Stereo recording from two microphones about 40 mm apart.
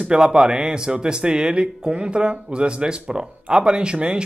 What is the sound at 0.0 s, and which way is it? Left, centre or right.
Speech, right.